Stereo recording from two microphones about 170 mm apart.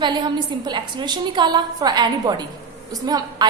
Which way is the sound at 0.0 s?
25° right (ahead or behind).